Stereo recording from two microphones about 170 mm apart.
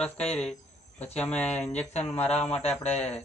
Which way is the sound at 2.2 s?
40° left (ahead or behind).